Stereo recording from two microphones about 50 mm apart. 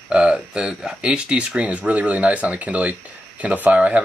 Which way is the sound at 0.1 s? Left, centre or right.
Centre.